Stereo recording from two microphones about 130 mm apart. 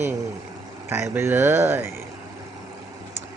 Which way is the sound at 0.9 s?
20° right (ahead or behind).